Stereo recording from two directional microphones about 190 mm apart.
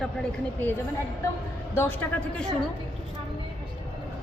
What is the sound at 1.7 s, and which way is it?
Speech, 10° left (ahead or behind).